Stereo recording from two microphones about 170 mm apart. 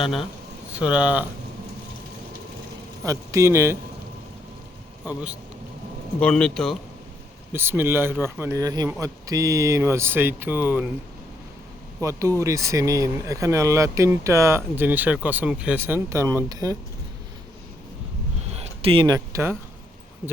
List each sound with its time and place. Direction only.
0.7 s speech: 5° right (ahead or behind)
3.1 s speech: 20° right (ahead or behind)
5.0 s speech: 10° right (ahead or behind)
6.1 s a man's voice: 5° left (ahead or behind)
7.5 s speech: 15° right (ahead or behind)
11.9 s speech: 20° right (ahead or behind)
18.5 s speech: 35° right (ahead or behind); by 19.5 s 15° right (ahead or behind)